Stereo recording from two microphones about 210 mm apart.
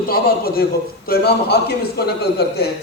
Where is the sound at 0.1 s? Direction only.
45° left (ahead or behind).